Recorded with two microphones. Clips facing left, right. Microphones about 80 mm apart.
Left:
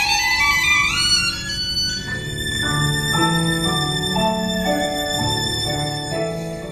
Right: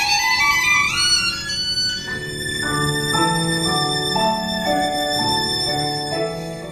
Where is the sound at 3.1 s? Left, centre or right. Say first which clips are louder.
Left 1 dB; centre.